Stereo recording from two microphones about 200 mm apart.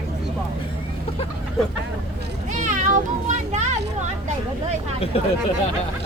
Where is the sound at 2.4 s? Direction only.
40° right (ahead or behind).